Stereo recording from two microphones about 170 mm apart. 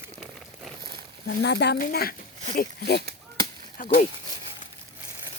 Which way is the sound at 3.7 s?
50° left (ahead or behind).